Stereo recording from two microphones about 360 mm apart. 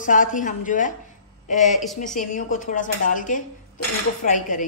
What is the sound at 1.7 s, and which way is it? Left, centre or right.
Speech, centre.